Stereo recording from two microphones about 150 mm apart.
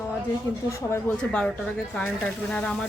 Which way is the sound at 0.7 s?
15° left (ahead or behind).